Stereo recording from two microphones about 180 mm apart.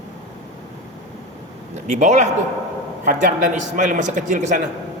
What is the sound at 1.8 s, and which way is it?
A man's voice, 40° right (ahead or behind).